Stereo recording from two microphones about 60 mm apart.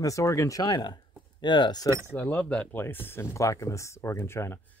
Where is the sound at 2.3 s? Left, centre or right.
Centre.